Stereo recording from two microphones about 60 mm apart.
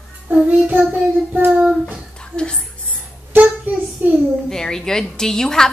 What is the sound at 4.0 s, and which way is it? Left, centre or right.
Speech, right.